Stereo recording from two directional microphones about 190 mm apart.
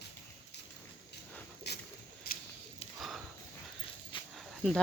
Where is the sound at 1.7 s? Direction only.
60° left (ahead or behind).